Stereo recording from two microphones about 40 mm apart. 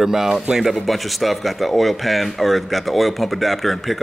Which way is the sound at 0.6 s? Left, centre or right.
Centre.